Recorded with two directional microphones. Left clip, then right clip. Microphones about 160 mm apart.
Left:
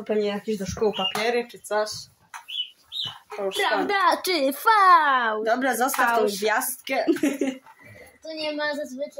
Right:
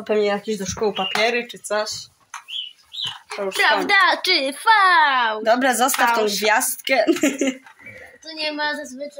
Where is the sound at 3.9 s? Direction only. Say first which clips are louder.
Right 5 dB; 50° left (ahead or behind).